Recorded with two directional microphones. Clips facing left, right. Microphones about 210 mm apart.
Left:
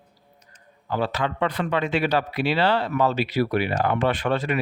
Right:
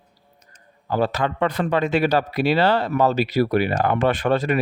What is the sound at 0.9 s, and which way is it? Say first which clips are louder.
A man's voice: right 4 dB; 45° right (ahead or behind).